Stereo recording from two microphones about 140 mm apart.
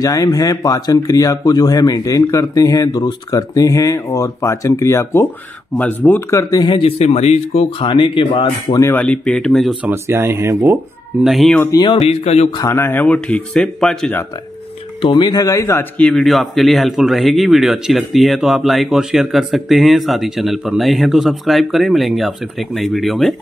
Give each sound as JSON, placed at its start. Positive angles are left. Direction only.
{"t": 0.0, "sound": "speech", "side_deg": 25}
{"t": 6.5, "sound": "speech", "side_deg": 35}
{"t": 8.8, "sound": "speech", "side_deg": 10}
{"t": 9.8, "sound": "speech", "side_deg": -20}
{"t": 11.2, "sound": "speech", "side_deg": 0}
{"t": 11.7, "sound": "speech", "side_deg": 30}
{"t": 12.0, "sound": "speech", "side_deg": 50}
{"t": 12.4, "sound": "speech", "side_deg": 30}
{"t": 12.7, "sound": "speech", "side_deg": 15}
{"t": 15.0, "sound": "speech", "side_deg": 35}